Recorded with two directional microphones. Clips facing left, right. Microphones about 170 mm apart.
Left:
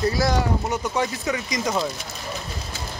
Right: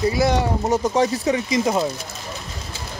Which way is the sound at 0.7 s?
40° right (ahead or behind).